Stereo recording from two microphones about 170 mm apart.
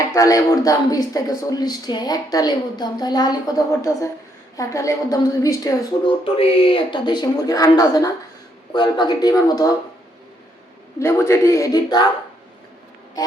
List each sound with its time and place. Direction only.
0.0 s speech: 20° left (ahead or behind)
6.2 s speech: 30° left (ahead or behind)
11.0 s speech: 15° left (ahead or behind)